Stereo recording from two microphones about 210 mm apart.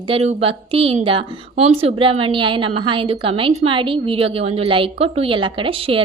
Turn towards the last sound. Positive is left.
turn(degrees=-25)  # may be behind; listen again after turning